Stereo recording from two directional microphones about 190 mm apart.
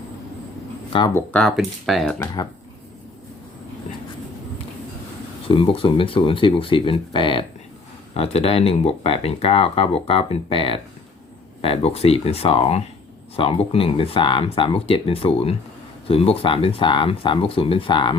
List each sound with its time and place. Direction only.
1.1 s speech: 5° left (ahead or behind)
2.1 s speech: 20° left (ahead or behind)
5.5 s speech: 30° left (ahead or behind)